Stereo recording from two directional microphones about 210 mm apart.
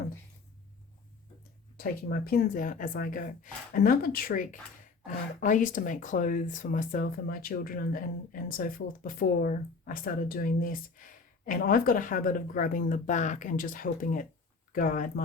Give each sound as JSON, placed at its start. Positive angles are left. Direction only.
{"t": 1.8, "sound": "speech", "side_deg": 45}